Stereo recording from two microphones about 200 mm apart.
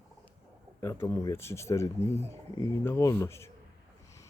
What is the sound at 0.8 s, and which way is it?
Speech, 15° left (ahead or behind).